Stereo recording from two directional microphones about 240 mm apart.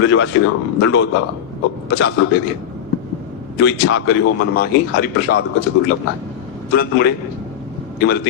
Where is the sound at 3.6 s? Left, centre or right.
Left.